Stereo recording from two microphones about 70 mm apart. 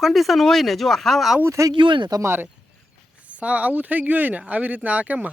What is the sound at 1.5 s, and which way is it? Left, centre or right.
Speech, right.